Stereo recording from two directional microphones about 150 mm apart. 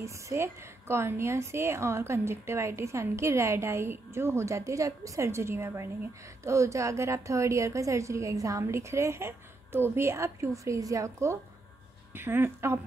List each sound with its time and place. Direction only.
0.0 s a woman's voice: 20° right (ahead or behind)